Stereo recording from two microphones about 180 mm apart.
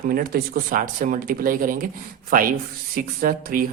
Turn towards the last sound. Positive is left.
turn(degrees=-50)  # may be behind; listen again after turning